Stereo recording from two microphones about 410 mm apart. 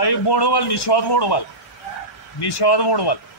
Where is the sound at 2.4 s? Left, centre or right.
Left.